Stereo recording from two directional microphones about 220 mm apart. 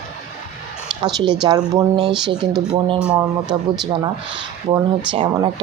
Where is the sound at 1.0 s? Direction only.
20° right (ahead or behind).